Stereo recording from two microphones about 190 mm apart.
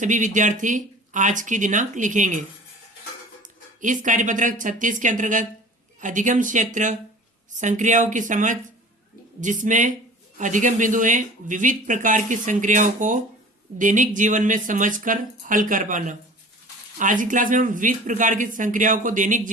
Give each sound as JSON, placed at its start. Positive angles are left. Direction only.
{"t": 0.0, "sound": "speech", "side_deg": -40}
{"t": 3.8, "sound": "speech", "side_deg": -40}